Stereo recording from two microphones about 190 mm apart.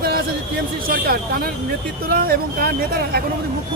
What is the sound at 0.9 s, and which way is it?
Speech, 50° right (ahead or behind).